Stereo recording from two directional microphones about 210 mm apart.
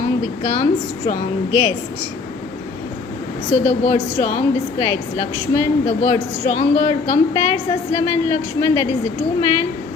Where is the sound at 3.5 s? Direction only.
30° left (ahead or behind).